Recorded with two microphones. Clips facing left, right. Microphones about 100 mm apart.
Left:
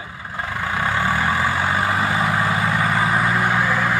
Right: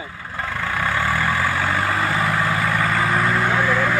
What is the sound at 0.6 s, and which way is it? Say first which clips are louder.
Vehicle: left 1 dB; 20° left (ahead or behind).